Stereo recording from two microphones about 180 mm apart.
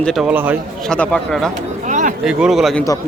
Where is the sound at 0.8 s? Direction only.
5° left (ahead or behind).